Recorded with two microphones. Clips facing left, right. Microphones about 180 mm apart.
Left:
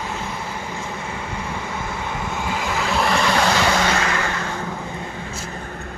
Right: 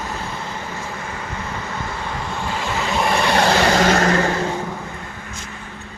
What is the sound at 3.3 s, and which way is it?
Vehicle, 40° right (ahead or behind).